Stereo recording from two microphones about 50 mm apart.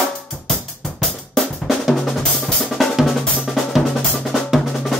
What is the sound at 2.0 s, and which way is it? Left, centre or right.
Drum, centre.